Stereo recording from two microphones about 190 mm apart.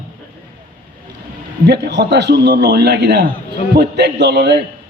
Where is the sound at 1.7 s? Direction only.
60° right (ahead or behind).